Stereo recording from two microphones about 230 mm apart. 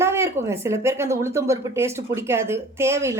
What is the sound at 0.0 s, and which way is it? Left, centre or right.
Speech, centre.